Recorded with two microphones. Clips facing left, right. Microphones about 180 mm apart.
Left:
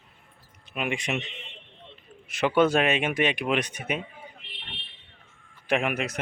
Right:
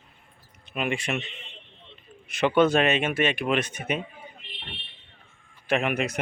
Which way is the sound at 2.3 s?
5° left (ahead or behind).